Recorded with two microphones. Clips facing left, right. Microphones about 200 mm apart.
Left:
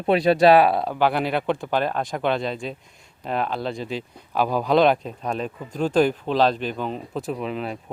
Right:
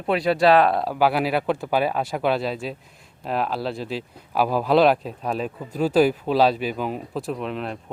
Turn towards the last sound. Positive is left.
turn(degrees=0)  # may be behind; listen again after turning